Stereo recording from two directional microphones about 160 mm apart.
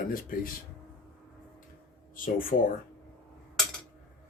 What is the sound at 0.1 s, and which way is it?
Speech, 60° left (ahead or behind).